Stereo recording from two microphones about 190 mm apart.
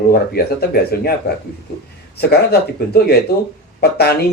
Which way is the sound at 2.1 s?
55° left (ahead or behind).